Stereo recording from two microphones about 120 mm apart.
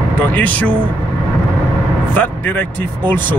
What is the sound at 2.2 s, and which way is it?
Speech, 15° left (ahead or behind).